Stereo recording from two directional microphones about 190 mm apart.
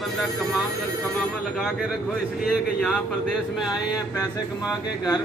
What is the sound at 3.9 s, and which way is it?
Speech, 20° left (ahead or behind).